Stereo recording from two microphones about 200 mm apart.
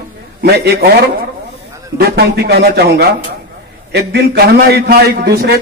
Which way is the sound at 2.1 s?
50° right (ahead or behind).